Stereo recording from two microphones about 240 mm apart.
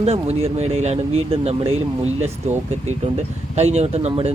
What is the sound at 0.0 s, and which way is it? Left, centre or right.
Speech, right.